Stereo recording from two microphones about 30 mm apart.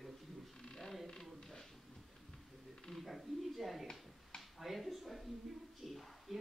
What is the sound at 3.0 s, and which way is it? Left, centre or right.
Speech, centre.